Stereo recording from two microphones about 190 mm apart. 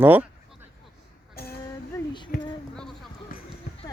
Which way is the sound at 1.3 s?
55° left (ahead or behind).